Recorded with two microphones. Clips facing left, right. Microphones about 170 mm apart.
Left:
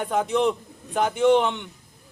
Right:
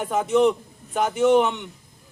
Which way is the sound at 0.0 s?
5° right (ahead or behind).